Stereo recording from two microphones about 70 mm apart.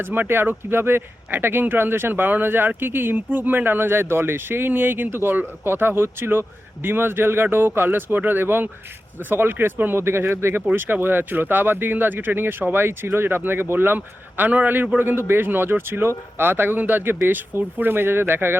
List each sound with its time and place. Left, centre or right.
0.0 s speech: right